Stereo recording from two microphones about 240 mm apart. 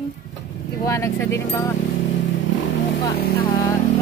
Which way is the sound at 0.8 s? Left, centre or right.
Centre.